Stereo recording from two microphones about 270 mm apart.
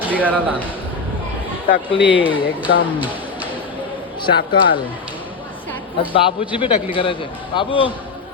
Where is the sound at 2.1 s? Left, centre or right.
Centre.